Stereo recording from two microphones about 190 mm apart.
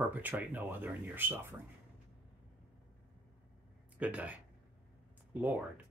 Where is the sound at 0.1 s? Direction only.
10° right (ahead or behind).